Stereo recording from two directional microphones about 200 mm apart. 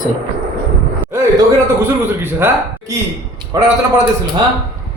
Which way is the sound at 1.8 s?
10° right (ahead or behind).